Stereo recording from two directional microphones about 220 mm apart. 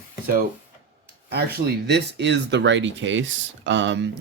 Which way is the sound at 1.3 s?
45° right (ahead or behind).